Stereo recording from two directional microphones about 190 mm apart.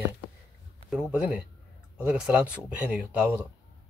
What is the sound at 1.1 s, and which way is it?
Speech, 5° right (ahead or behind).